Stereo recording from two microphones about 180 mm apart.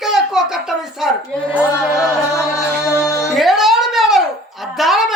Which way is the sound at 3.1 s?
15° left (ahead or behind).